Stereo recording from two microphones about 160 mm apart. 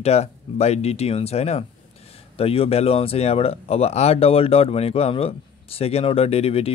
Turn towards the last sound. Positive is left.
turn(degrees=40)  # may be behind; listen again after turning